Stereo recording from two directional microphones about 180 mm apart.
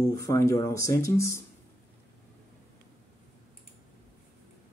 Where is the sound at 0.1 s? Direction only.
20° left (ahead or behind).